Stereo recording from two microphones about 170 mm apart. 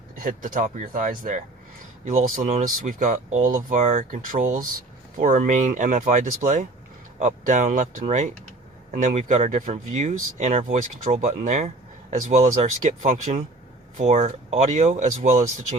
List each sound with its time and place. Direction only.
0.2 s speech: 50° right (ahead or behind)